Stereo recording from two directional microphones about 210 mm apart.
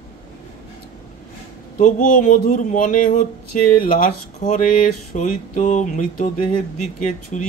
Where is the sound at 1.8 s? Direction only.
40° left (ahead or behind).